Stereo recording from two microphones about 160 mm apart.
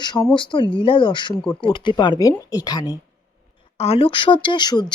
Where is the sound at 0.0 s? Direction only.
30° left (ahead or behind).